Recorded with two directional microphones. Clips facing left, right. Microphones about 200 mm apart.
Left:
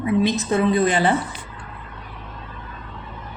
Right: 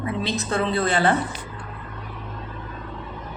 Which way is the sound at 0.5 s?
15° left (ahead or behind).